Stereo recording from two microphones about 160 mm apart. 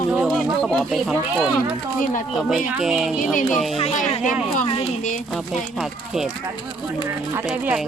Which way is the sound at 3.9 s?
50° left (ahead or behind).